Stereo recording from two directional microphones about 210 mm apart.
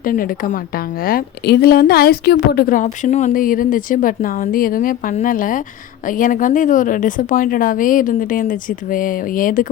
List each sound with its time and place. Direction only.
0.0 s a woman's voice: 40° left (ahead or behind)